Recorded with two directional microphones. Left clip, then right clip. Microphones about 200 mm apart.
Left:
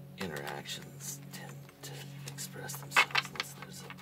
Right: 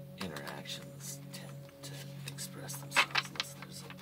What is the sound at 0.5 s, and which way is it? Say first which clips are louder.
Music: left 2 dB; 45° left (ahead or behind).